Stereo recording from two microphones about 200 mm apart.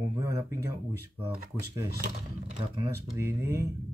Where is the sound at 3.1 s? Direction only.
15° right (ahead or behind).